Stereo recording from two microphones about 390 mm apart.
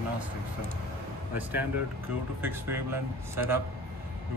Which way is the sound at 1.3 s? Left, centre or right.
Centre.